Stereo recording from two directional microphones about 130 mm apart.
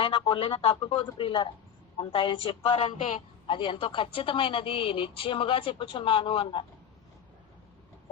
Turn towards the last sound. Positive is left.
turn(degrees=40)  # may be behind; listen again after turning